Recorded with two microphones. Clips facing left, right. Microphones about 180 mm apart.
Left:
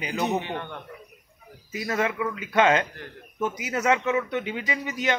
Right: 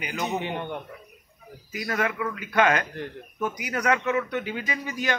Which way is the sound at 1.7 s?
25° left (ahead or behind).